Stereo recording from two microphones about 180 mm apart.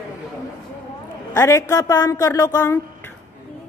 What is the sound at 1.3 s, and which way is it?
A woman's voice, 15° left (ahead or behind).